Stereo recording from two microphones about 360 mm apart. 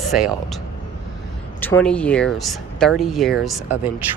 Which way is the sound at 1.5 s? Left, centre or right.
Centre.